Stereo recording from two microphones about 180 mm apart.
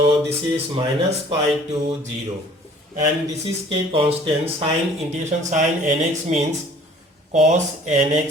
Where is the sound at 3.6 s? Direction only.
30° right (ahead or behind).